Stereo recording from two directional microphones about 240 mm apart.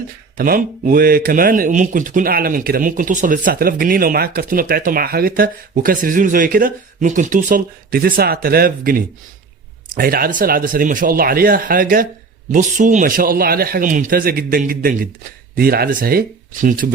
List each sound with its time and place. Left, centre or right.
0.3 s speech: right